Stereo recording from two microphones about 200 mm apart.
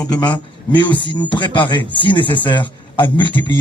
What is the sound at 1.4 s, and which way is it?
A man's voice, 25° left (ahead or behind).